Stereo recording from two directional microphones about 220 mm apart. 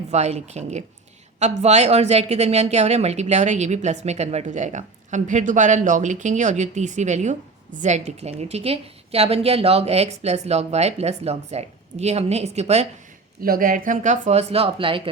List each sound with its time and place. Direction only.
0.1 s a woman's voice: 30° right (ahead or behind)
13.4 s speech: 40° right (ahead or behind); by 15.1 s 25° right (ahead or behind)